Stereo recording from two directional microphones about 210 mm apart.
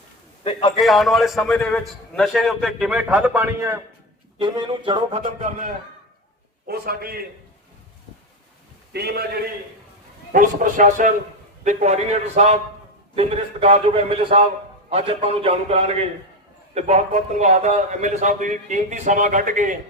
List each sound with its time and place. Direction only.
0.8 s a man's voice: centre (ahead or behind)
4.4 s a man's voice: 20° right (ahead or behind); by 7.2 s 45° right (ahead or behind)
8.9 s a man's voice: 50° right (ahead or behind)